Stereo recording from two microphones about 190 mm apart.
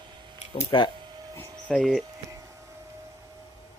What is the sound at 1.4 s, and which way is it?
Speech, 5° left (ahead or behind).